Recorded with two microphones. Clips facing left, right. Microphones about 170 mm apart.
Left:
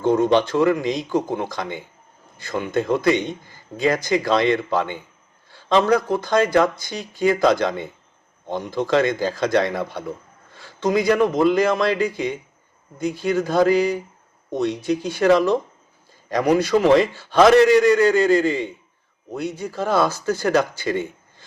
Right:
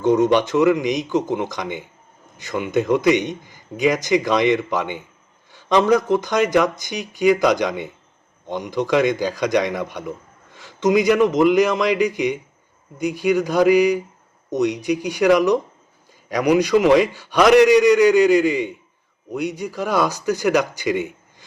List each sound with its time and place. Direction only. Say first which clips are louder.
0.0 s speech: right 1 dB; 20° right (ahead or behind)